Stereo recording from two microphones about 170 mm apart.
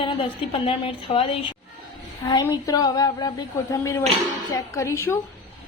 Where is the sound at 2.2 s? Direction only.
20° left (ahead or behind).